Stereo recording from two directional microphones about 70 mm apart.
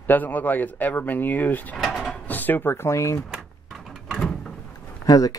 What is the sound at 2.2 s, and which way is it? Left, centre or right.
Drawer open or close, left.